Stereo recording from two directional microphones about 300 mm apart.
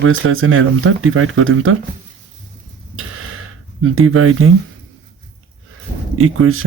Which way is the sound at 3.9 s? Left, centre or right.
Right.